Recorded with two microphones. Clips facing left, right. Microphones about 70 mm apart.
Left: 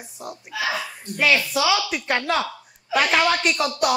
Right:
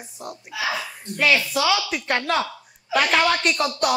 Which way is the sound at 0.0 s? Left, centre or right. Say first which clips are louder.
Even; centre.